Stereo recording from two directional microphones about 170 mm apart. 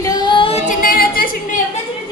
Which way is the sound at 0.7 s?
55° left (ahead or behind).